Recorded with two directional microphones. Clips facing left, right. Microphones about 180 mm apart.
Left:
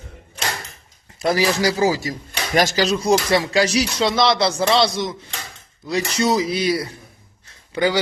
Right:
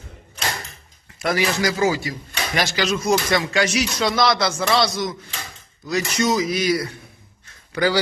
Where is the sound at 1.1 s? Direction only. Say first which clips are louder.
Left 3 dB; 30° left (ahead or behind).